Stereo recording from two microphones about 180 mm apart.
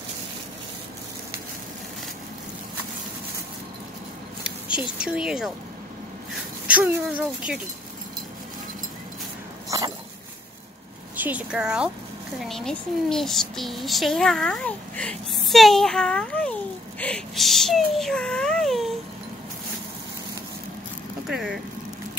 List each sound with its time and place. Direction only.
4.4 s a sound: 5° right (ahead or behind)
4.9 s a child's voice: 5° right (ahead or behind)
6.7 s speech: 10° right (ahead or behind)
9.7 s dog: 20° right (ahead or behind)
11.1 s a child's voice: 10° right (ahead or behind)
21.3 s speech: 5° right (ahead or behind)